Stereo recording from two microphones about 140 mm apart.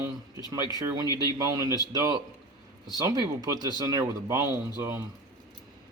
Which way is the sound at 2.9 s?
25° right (ahead or behind).